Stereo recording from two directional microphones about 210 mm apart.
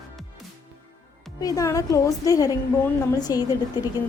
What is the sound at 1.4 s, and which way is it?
A woman's voice, 15° left (ahead or behind).